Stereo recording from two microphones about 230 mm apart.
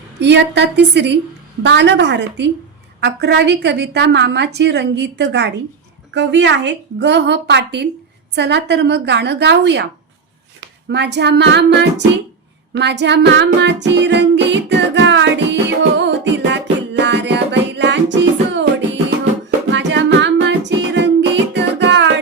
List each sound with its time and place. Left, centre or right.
0.2 s a woman's voice: right
10.8 s a woman's voice: right
12.7 s music: right
19.7 s music: right